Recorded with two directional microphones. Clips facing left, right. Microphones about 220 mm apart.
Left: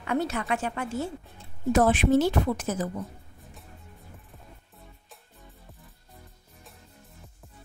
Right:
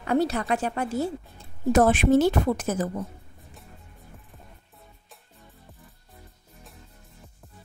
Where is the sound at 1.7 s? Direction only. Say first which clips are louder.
Right 2 dB; 50° right (ahead or behind).